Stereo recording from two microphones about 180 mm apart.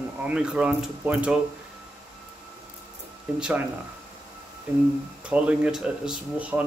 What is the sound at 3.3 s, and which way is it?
Speech, 5° right (ahead or behind).